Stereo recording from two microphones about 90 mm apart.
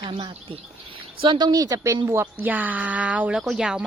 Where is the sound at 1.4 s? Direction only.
45° right (ahead or behind).